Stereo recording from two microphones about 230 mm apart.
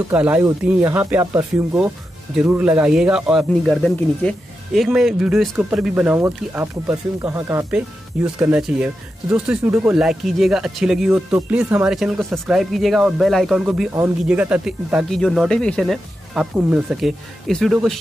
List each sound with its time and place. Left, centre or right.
0.1 s speech: centre